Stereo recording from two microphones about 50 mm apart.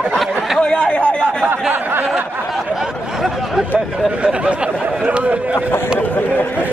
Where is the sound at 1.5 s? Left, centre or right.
Right.